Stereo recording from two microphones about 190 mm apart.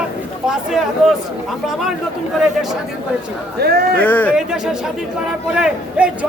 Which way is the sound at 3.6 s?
55° right (ahead or behind).